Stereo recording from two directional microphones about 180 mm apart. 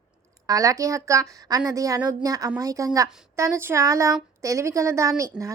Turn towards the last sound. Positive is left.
turn(degrees=-20)  # may be behind; listen again after turning